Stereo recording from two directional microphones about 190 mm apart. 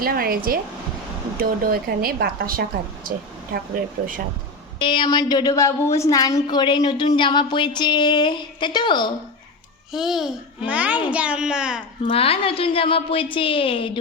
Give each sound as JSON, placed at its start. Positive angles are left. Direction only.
{"t": 0.0, "sound": "speech", "side_deg": -50}
{"t": 4.8, "sound": "a woman's voice", "side_deg": 25}
{"t": 9.9, "sound": "a child's voice", "side_deg": 0}
{"t": 12.0, "sound": "a woman's voice", "side_deg": 30}